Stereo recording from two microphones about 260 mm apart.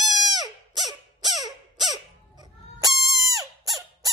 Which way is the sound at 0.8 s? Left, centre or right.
Centre.